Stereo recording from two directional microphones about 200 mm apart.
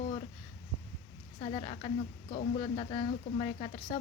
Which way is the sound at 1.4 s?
30° left (ahead or behind).